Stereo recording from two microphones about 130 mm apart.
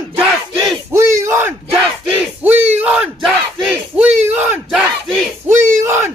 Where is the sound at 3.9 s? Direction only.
10° right (ahead or behind).